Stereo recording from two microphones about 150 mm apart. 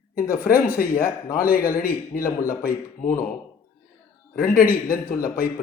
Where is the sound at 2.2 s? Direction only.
20° left (ahead or behind).